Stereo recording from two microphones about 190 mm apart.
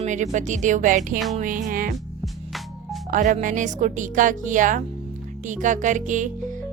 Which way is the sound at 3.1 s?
40° right (ahead or behind).